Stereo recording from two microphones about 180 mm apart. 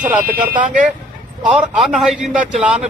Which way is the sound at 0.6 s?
45° right (ahead or behind).